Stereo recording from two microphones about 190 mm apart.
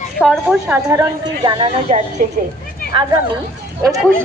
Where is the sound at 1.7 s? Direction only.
35° right (ahead or behind).